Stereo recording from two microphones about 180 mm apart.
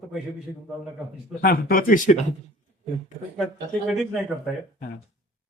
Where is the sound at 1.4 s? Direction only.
55° left (ahead or behind).